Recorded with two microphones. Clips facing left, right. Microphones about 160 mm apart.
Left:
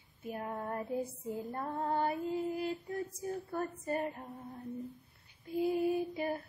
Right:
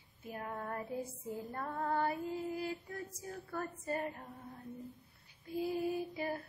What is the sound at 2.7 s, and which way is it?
Mantra, 20° left (ahead or behind).